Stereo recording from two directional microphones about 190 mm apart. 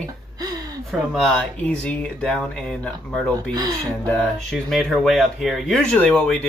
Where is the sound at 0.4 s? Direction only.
20° right (ahead or behind).